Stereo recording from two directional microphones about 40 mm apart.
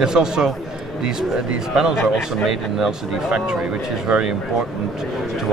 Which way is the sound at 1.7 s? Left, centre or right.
Centre.